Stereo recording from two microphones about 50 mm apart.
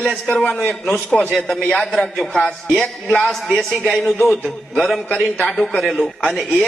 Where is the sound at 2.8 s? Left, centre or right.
Left.